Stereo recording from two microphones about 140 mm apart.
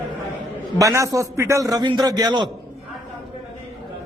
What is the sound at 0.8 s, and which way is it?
A man's voice, 20° right (ahead or behind).